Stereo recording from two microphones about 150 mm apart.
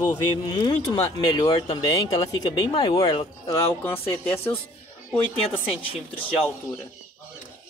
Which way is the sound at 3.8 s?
15° left (ahead or behind).